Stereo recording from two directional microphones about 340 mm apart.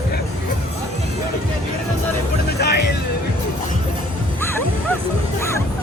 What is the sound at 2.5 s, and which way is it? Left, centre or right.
Music, left.